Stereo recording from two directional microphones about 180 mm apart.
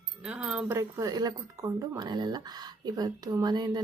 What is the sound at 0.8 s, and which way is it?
Speech, 20° right (ahead or behind).